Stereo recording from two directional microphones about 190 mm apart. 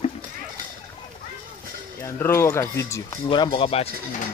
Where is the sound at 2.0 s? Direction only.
15° left (ahead or behind); by 4.2 s 30° left (ahead or behind).